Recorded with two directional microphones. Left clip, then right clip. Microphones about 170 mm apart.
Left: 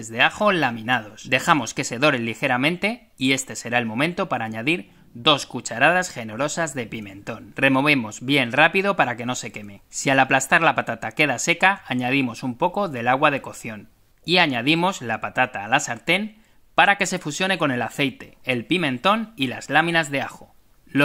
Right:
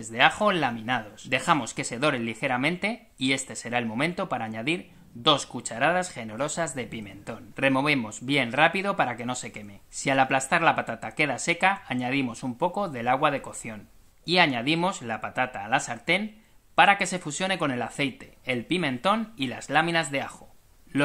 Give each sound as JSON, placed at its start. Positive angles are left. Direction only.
{"t": 0.0, "sound": "a man's voice", "side_deg": 30}